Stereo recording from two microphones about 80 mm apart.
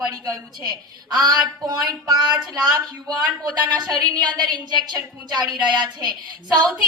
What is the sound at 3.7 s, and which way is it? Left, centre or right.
A woman's voice, right.